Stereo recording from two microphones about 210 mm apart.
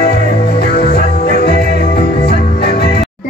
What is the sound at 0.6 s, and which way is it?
Music, 50° left (ahead or behind).